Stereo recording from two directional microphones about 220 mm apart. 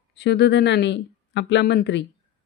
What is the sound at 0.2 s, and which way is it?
Speech, 50° left (ahead or behind).